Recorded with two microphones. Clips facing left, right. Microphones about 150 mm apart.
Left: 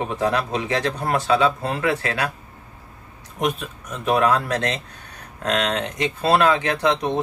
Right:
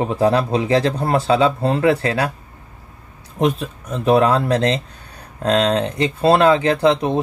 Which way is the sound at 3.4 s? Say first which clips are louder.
Right 5 dB; 30° right (ahead or behind).